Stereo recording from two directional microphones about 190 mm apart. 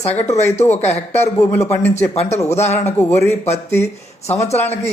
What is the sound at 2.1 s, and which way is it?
Speech, 35° left (ahead or behind).